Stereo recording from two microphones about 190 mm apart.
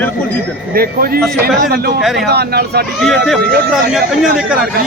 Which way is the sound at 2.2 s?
60° right (ahead or behind).